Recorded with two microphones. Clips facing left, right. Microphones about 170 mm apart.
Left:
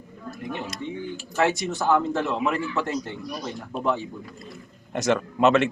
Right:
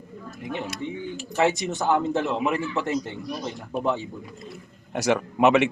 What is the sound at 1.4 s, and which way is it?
A man's voice, 20° right (ahead or behind).